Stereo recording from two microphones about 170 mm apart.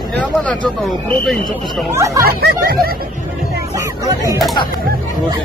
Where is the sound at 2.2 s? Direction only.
60° right (ahead or behind).